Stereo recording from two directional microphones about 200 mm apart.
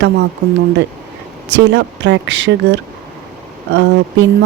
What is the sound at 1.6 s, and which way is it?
Speech, 60° right (ahead or behind).